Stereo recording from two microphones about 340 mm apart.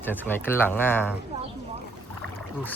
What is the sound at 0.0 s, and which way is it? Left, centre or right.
Speech, centre.